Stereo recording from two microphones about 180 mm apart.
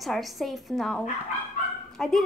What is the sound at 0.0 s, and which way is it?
A woman's voice, centre (ahead or behind).